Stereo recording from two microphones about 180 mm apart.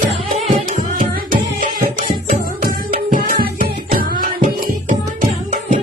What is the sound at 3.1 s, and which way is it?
Music, 50° right (ahead or behind).